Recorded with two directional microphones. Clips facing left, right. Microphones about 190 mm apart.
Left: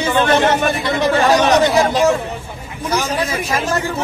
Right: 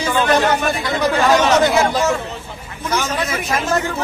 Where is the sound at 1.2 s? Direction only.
35° left (ahead or behind).